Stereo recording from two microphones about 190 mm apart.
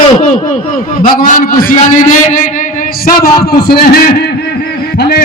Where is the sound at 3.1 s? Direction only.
50° left (ahead or behind).